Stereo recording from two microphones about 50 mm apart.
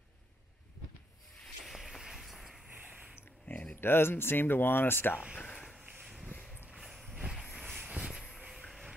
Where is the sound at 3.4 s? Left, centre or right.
Left.